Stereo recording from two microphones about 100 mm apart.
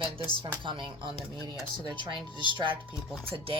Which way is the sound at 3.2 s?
65° right (ahead or behind).